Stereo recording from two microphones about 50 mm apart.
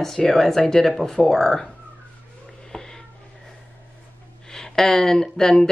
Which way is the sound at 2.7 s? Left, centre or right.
Centre.